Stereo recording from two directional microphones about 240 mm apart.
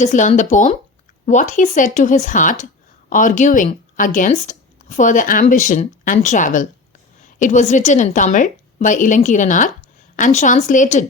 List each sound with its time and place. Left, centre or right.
0.0 s a woman's voice: left